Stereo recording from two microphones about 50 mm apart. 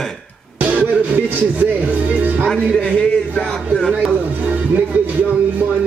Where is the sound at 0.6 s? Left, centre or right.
Right.